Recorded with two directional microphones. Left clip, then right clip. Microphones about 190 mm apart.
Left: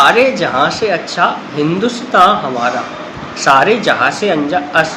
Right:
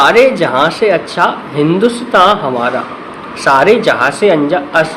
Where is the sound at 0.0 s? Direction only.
45° right (ahead or behind).